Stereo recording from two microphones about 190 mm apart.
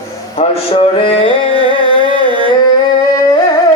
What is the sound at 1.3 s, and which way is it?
Carnatic music, 25° right (ahead or behind).